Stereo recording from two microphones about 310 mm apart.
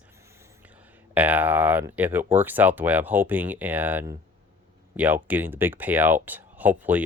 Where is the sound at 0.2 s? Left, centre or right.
Centre.